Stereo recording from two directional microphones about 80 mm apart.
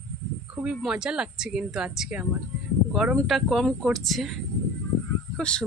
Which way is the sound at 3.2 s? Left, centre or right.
Centre.